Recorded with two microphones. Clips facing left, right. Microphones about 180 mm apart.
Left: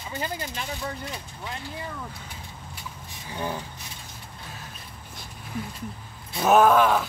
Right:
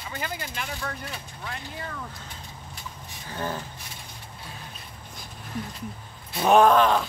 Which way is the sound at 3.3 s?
15° left (ahead or behind).